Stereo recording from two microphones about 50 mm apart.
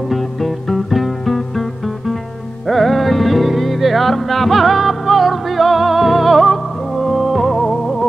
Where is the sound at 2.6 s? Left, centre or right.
Centre.